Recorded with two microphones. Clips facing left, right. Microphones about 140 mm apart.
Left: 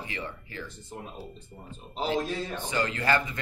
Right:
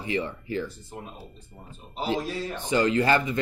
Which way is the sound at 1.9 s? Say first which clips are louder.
Even; 5° right (ahead or behind).